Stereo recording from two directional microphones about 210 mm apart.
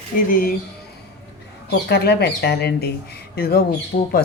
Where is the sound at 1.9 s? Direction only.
50° left (ahead or behind).